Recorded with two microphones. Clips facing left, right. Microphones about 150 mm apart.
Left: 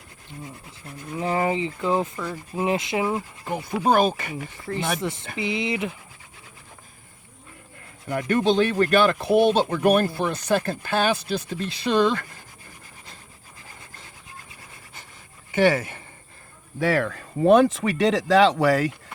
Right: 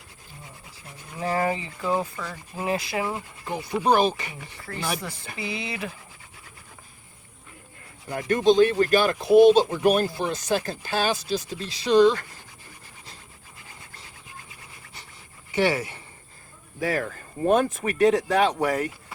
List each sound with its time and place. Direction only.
1.2 s speech: 20° left (ahead or behind)
2.1 s speech: 10° left (ahead or behind)
2.6 s speech: 20° left (ahead or behind)
3.4 s speech: 45° left (ahead or behind)
4.6 s speech: 25° left (ahead or behind)
8.0 s speech: 60° left (ahead or behind)
15.5 s speech: 50° left (ahead or behind)
16.8 s speech: 75° left (ahead or behind)